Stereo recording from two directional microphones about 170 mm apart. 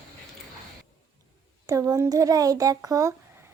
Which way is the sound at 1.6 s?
20° right (ahead or behind).